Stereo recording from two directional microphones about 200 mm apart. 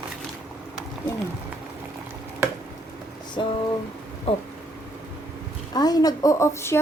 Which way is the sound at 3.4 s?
25° left (ahead or behind).